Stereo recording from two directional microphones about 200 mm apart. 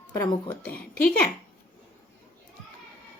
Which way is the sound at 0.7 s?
45° left (ahead or behind).